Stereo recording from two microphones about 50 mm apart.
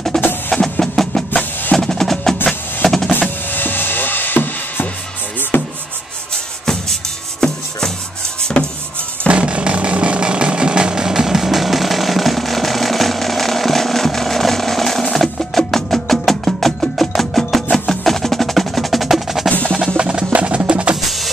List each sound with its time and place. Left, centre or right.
0.1 s music: centre
1.8 s percussion: centre
2.8 s drum: centre
3.2 s music: left
5.5 s a sound: left
6.3 s music: centre
8.4 s rub: centre
9.3 s a sound: right; by 17.6 s centre
17.6 s percussion: centre
20.0 s music: centre
21.0 s music: centre